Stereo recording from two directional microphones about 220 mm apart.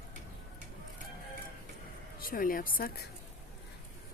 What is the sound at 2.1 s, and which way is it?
Speech, 40° left (ahead or behind).